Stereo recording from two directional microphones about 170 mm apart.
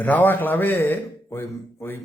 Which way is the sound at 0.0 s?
10° left (ahead or behind).